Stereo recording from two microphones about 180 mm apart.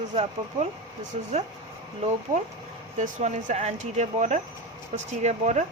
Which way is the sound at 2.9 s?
40° right (ahead or behind).